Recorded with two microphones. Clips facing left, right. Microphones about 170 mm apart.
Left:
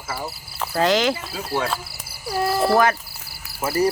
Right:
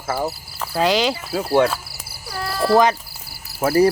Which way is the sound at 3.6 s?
60° right (ahead or behind).